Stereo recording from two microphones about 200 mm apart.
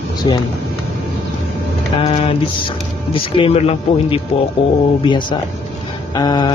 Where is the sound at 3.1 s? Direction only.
25° left (ahead or behind).